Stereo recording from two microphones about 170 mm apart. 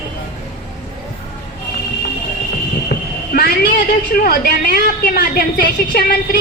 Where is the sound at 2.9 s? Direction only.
65° left (ahead or behind).